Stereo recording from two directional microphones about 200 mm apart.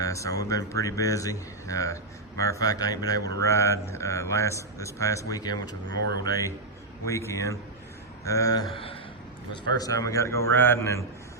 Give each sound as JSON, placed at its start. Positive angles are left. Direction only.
{"t": 0.0, "sound": "a man's voice", "side_deg": 15}